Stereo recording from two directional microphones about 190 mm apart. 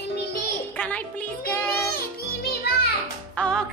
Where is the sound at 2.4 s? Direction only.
55° left (ahead or behind).